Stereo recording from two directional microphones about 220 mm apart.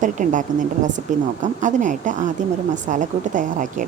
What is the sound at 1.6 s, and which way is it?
A woman's voice, 35° right (ahead or behind).